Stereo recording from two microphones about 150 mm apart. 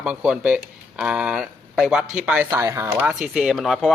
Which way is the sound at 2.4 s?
20° right (ahead or behind).